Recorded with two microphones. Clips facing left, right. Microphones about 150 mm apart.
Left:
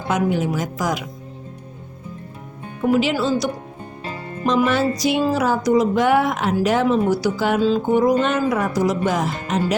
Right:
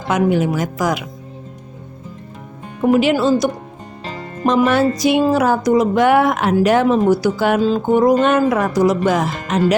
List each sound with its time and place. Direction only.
0.1 s a woman's voice: 75° right (ahead or behind)
2.9 s speech: 55° right (ahead or behind)
4.4 s music: 55° right (ahead or behind); by 9.7 s 80° right